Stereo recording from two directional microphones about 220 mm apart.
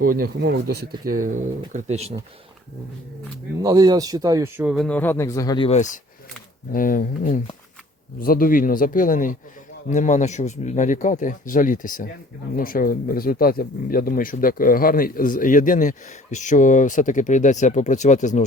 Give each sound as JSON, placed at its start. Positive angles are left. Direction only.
{"t": 0.0, "sound": "speech", "side_deg": -40}
{"t": 3.6, "sound": "speech", "side_deg": -15}
{"t": 4.9, "sound": "speech", "side_deg": 10}